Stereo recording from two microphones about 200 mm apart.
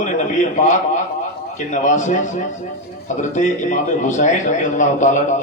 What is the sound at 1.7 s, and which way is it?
A man's voice, 40° left (ahead or behind).